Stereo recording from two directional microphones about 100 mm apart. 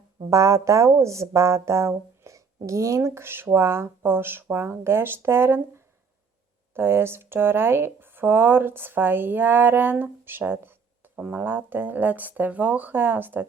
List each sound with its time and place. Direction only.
0.3 s speech: 30° right (ahead or behind)